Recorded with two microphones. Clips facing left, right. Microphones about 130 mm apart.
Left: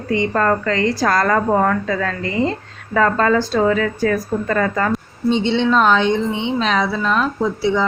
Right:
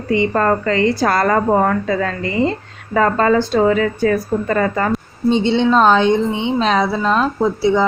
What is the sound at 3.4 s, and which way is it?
Speech, 5° right (ahead or behind).